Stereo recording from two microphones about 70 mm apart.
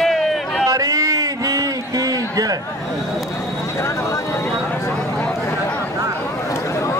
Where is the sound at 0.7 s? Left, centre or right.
Right.